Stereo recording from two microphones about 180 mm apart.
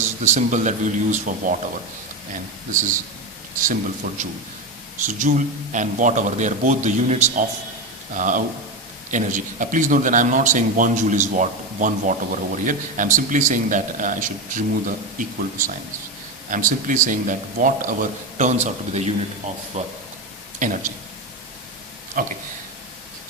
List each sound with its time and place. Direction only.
0.3 s speech: 40° right (ahead or behind)
22.2 s speech: 50° right (ahead or behind)